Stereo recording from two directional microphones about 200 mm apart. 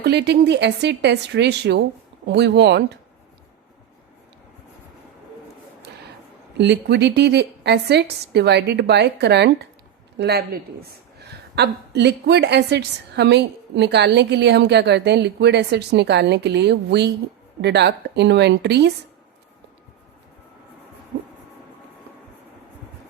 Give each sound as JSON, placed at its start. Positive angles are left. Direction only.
{"t": 0.0, "sound": "a woman's voice", "side_deg": -60}
{"t": 6.6, "sound": "a woman's voice", "side_deg": -60}